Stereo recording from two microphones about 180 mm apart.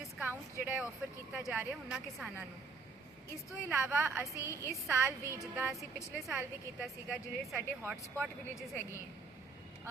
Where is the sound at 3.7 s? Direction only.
10° right (ahead or behind).